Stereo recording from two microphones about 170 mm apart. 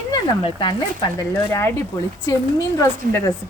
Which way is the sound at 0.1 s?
25° left (ahead or behind).